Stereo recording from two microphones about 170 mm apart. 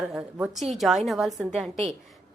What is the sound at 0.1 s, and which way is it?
A woman's voice, 5° right (ahead or behind).